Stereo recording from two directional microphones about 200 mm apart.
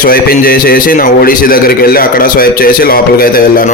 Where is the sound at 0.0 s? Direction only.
45° left (ahead or behind).